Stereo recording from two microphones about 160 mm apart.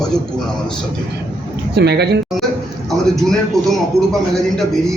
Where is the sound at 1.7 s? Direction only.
90° right.